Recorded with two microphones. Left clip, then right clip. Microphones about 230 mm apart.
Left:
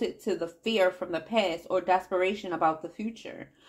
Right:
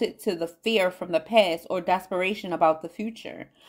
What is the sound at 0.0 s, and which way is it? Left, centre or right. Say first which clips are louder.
Speech: right 3 dB; right.